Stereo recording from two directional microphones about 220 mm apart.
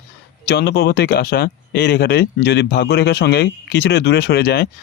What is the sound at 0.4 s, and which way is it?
Speech, 50° left (ahead or behind).